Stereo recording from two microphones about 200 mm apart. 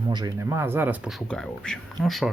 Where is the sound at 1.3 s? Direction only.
5° left (ahead or behind).